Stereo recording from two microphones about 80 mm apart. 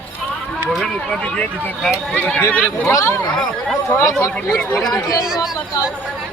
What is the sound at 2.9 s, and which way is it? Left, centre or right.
Speech, left.